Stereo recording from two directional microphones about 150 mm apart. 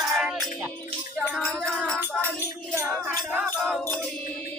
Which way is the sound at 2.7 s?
15° right (ahead or behind).